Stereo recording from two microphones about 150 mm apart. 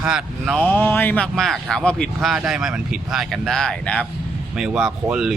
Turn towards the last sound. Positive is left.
turn(degrees=-5)  # may be behind; listen again after turning